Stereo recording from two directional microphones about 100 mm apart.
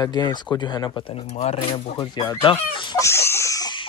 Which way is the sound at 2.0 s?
45° left (ahead or behind).